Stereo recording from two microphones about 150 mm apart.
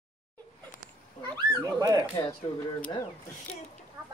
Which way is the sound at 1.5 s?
25° right (ahead or behind).